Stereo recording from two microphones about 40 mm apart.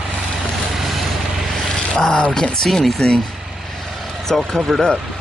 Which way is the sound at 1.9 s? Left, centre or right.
Left.